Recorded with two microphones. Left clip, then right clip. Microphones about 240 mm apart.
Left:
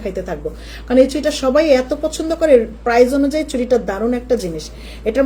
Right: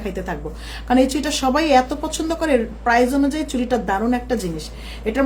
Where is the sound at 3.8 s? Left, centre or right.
Centre.